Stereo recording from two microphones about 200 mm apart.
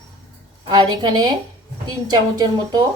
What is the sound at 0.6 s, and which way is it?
Speech, 20° right (ahead or behind).